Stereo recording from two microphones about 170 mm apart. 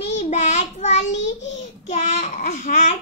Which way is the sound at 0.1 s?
45° left (ahead or behind).